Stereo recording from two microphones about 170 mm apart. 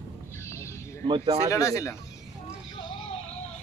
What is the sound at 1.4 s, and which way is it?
Speech, 20° left (ahead or behind).